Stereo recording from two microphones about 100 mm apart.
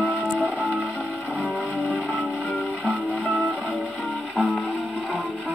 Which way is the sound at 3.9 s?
Centre (ahead or behind).